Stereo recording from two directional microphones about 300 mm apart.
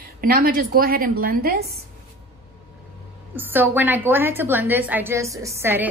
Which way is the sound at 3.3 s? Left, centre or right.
Centre.